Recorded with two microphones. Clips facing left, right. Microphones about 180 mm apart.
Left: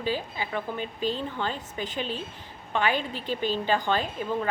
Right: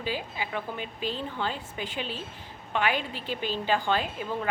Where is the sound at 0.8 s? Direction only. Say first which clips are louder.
Left 4 dB; 40° left (ahead or behind).